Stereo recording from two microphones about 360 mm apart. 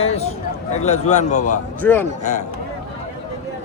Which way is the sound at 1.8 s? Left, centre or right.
Centre.